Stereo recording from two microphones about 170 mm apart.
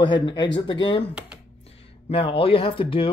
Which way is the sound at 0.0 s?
25° left (ahead or behind).